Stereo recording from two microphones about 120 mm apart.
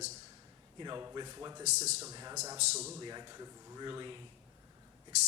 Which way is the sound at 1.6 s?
70° right (ahead or behind).